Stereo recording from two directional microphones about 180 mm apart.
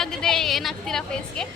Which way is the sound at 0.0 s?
5° left (ahead or behind).